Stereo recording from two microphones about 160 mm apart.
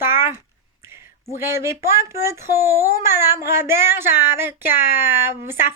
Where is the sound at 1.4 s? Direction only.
15° right (ahead or behind).